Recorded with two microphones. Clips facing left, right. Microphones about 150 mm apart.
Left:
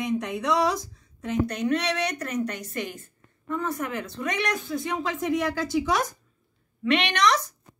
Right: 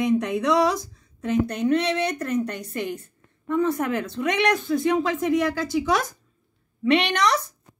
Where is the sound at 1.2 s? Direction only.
55° right (ahead or behind).